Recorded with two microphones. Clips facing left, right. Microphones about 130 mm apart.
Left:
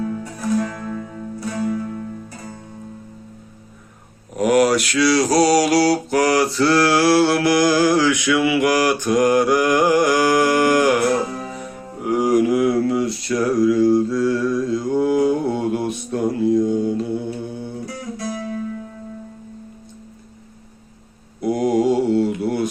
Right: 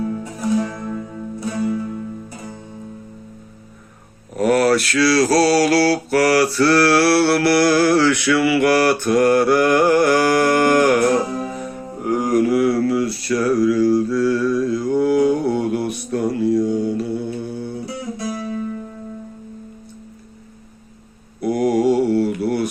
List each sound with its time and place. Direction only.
0.0 s music: 20° right (ahead or behind)
4.4 s mantra: 15° left (ahead or behind)
12.0 s mantra: 10° left (ahead or behind)
17.8 s music: 25° right (ahead or behind)
21.4 s mantra: 25° left (ahead or behind)